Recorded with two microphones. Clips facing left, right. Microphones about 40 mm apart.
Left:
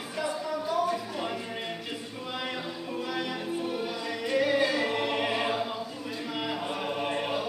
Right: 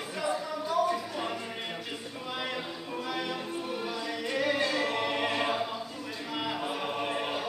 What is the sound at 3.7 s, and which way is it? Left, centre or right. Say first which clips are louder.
A capella: left 2 dB; centre.